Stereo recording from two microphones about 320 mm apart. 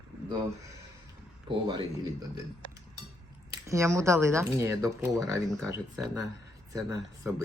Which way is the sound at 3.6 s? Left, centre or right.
Centre.